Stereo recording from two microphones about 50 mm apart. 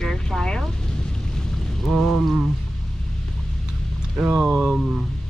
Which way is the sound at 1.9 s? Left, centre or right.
Centre.